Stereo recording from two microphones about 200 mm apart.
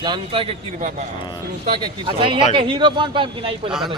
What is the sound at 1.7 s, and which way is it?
A man's voice, 25° right (ahead or behind).